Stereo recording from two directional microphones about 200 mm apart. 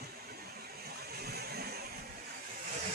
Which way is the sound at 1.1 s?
50° right (ahead or behind).